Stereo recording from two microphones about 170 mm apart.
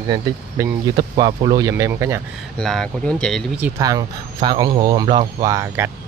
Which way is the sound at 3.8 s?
20° right (ahead or behind).